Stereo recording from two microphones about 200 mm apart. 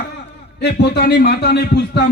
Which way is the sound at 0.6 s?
55° left (ahead or behind).